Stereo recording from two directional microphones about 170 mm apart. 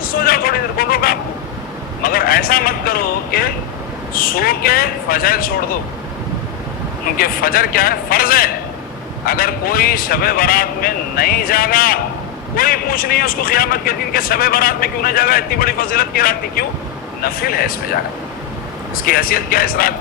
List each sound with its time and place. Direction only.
0.0 s vehicle: 60° left (ahead or behind)
2.0 s a man's voice: 60° left (ahead or behind)
7.2 s a man's voice: 60° left (ahead or behind)
18.9 s a man's voice: 60° left (ahead or behind)